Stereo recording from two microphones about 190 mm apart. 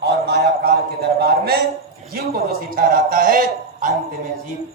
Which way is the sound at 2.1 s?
50° right (ahead or behind).